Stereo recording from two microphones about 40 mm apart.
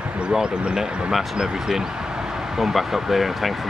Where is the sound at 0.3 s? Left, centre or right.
Centre.